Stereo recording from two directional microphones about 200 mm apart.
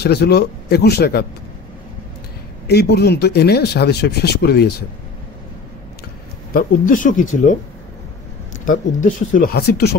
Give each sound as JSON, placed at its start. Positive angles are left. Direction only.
{"t": 0.0, "sound": "speech", "side_deg": 55}
{"t": 2.7, "sound": "speech", "side_deg": 55}
{"t": 6.5, "sound": "speech", "side_deg": 40}
{"t": 8.6, "sound": "speech", "side_deg": 40}